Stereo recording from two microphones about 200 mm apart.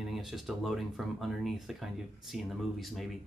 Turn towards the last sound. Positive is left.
turn(degrees=0)  # may be behind; listen again after turning